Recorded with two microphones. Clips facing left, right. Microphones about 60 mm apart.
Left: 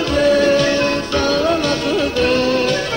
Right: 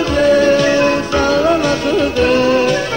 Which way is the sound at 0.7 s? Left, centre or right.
Centre.